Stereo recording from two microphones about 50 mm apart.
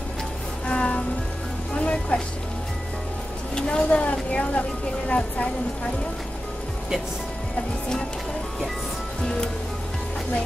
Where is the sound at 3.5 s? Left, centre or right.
Centre.